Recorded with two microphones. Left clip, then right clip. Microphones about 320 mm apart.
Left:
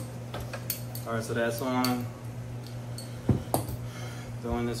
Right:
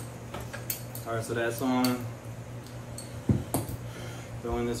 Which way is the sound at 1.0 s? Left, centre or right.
Centre.